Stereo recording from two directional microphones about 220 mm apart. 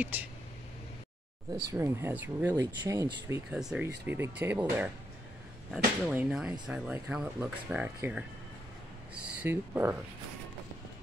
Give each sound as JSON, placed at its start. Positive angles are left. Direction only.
{"t": 0.0, "sound": "speech", "side_deg": -5}
{"t": 1.6, "sound": "speech", "side_deg": -15}
{"t": 3.5, "sound": "speech", "side_deg": -5}
{"t": 6.0, "sound": "speech", "side_deg": -5}